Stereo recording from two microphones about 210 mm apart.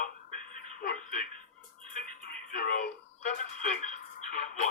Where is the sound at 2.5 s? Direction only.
40° left (ahead or behind).